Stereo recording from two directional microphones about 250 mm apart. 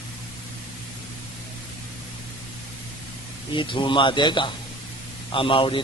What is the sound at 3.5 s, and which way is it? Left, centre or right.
A man's voice, centre.